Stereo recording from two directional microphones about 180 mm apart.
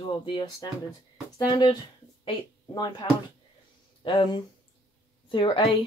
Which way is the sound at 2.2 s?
25° left (ahead or behind).